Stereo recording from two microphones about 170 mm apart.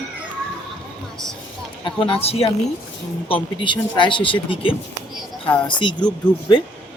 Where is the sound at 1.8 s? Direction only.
30° left (ahead or behind).